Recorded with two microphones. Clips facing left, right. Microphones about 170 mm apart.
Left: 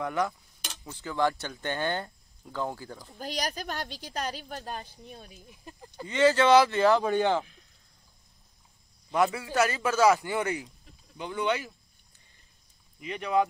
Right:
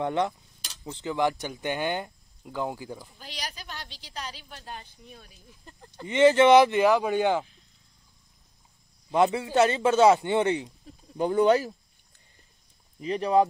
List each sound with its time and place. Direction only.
0.0 s speech: 25° right (ahead or behind)
3.2 s a woman's voice: 45° left (ahead or behind)
5.3 s speech: 15° left (ahead or behind)
6.0 s speech: 20° right (ahead or behind)
9.1 s speech: 20° right (ahead or behind)
11.1 s speech: 40° right (ahead or behind)
13.0 s speech: 35° right (ahead or behind)